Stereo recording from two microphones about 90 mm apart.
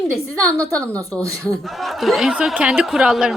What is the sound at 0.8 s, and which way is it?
Speech, 15° left (ahead or behind).